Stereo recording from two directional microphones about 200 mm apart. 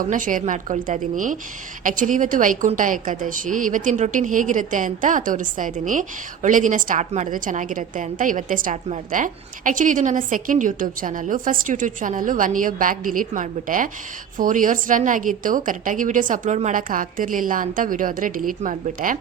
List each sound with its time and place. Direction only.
0.0 s a woman's voice: 40° right (ahead or behind)